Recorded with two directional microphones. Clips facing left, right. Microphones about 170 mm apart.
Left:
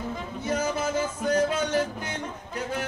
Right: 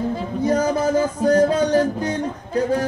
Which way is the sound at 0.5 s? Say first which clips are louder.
Right 8 dB; 35° right (ahead or behind).